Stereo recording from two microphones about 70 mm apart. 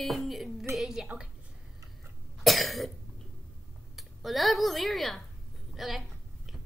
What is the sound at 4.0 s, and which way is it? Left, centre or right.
A woman's voice, centre.